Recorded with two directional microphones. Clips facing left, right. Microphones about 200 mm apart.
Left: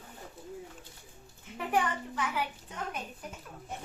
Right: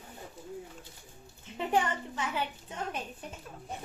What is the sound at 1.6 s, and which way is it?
Speech, 25° right (ahead or behind).